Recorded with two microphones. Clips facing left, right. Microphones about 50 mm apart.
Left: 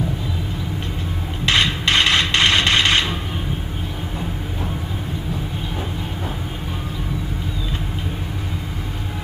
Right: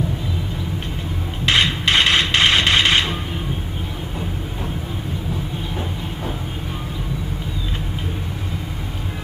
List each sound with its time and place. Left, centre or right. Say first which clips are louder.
1.5 s hammer: right 1 dB; centre